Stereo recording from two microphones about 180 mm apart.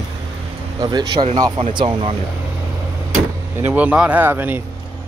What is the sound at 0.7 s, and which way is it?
Speech, 25° right (ahead or behind).